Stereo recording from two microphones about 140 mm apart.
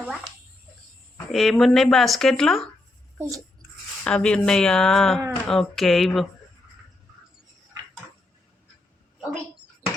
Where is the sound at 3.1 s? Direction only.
20° right (ahead or behind).